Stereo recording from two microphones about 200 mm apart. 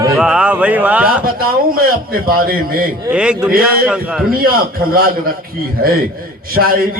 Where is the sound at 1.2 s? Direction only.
45° right (ahead or behind).